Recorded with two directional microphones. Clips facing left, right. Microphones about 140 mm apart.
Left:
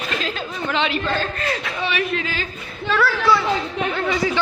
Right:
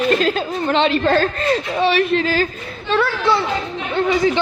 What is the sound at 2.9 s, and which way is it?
Speech, 25° right (ahead or behind).